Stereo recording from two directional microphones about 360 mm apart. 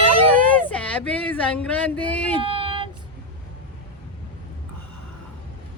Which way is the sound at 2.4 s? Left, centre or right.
Centre.